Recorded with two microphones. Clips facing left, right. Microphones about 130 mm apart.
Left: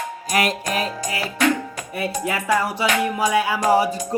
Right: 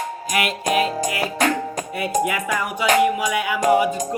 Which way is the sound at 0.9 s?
35° right (ahead or behind).